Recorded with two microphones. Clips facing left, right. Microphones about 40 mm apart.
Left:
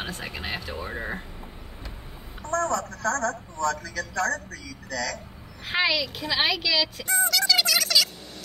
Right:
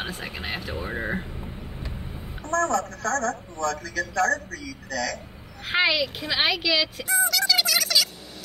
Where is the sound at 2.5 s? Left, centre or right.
Right.